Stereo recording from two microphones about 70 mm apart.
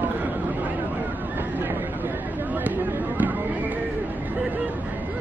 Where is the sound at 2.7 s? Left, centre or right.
Right.